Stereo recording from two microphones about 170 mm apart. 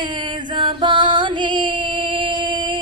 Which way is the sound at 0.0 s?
25° right (ahead or behind).